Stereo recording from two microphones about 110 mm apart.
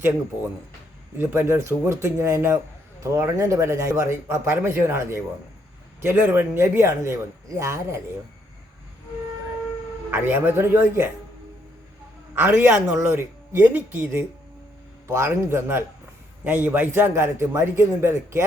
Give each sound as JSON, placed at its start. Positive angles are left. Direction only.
{"t": 1.2, "sound": "a man's voice", "side_deg": -20}
{"t": 10.1, "sound": "a man's voice", "side_deg": -20}
{"t": 12.3, "sound": "a man's voice", "side_deg": -15}